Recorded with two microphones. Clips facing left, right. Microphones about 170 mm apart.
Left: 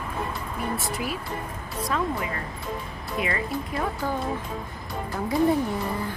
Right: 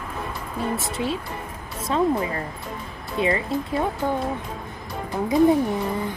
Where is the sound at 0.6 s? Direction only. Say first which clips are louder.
Right 4 dB; 25° right (ahead or behind).